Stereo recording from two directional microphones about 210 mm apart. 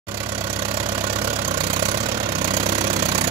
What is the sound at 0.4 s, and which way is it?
Vehicle, 25° right (ahead or behind).